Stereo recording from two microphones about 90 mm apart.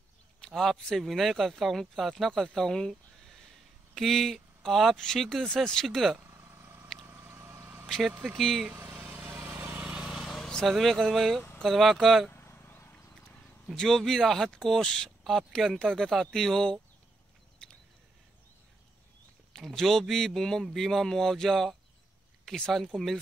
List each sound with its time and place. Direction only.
0.4 s speech: 5° left (ahead or behind)
6.1 s vehicle: 25° right (ahead or behind)
8.4 s speech: 5° left (ahead or behind)
8.7 s vehicle: 30° right (ahead or behind)
9.5 s vehicle: 20° right (ahead or behind); by 11.4 s centre (ahead or behind)
11.6 s speech: centre (ahead or behind)
12.3 s a sound: 25° left (ahead or behind)
13.1 s speech: 5° left (ahead or behind)
17.6 s a sound: 10° left (ahead or behind)
19.5 s speech: 5° left (ahead or behind)